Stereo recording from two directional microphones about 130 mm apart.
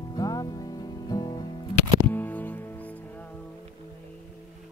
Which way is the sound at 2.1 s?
15° left (ahead or behind).